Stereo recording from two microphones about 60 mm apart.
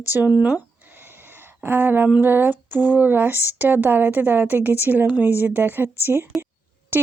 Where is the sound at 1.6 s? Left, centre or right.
Right.